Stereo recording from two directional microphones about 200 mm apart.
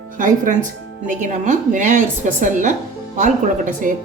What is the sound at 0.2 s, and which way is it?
Speech, 40° right (ahead or behind).